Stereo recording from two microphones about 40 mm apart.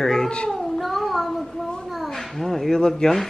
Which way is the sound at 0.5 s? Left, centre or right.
Centre.